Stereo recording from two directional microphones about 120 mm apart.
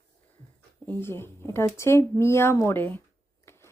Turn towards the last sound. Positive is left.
turn(degrees=20)  # may be behind; listen again after turning